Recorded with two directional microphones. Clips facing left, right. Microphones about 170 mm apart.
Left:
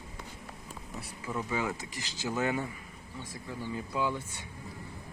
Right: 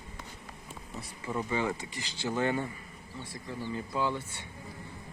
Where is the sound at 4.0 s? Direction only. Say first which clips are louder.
Even; 10° left (ahead or behind).